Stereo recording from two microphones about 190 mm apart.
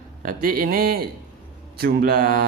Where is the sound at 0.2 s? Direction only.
50° right (ahead or behind).